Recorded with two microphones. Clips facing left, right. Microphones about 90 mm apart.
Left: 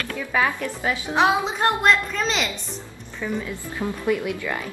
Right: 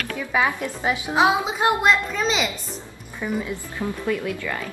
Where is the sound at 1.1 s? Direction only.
5° right (ahead or behind).